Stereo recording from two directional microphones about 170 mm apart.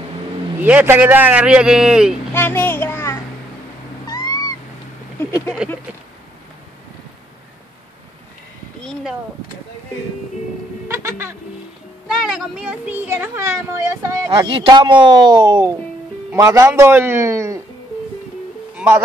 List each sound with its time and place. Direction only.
0.6 s a man's voice: 10° right (ahead or behind)
2.3 s a child's voice: 15° left (ahead or behind)
4.1 s cat: 20° left (ahead or behind)
10.9 s a sound: 15° right (ahead or behind)
12.1 s a man's voice: centre (ahead or behind); by 14.3 s 15° right (ahead or behind)
14.3 s a man's voice: 30° right (ahead or behind)
18.8 s speech: 10° right (ahead or behind)